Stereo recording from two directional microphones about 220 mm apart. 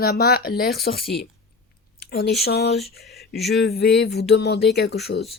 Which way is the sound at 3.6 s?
50° left (ahead or behind).